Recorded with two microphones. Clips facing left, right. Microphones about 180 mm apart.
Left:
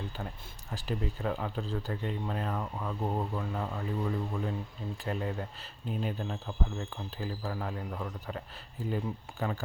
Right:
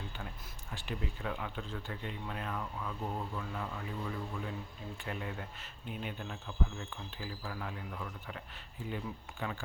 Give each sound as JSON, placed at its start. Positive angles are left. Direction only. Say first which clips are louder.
{"t": 0.7, "sound": "speech", "louder": "left 6 dB", "side_deg": 40}